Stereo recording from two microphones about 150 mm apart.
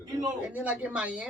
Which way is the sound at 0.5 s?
10° right (ahead or behind).